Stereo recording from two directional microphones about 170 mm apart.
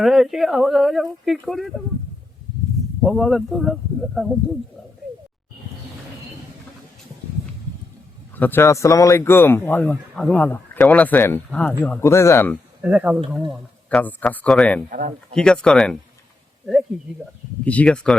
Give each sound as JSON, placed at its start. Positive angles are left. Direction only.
{"t": 0.0, "sound": "speech", "side_deg": 0}
{"t": 3.0, "sound": "speech", "side_deg": 0}
{"t": 8.4, "sound": "speech", "side_deg": 10}
{"t": 12.8, "sound": "speech", "side_deg": -10}
{"t": 13.9, "sound": "speech", "side_deg": 10}
{"t": 14.8, "sound": "speech", "side_deg": -55}
{"t": 15.4, "sound": "speech", "side_deg": 5}
{"t": 17.7, "sound": "speech", "side_deg": 5}